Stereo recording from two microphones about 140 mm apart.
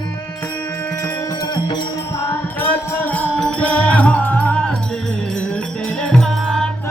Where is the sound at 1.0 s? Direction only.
25° left (ahead or behind).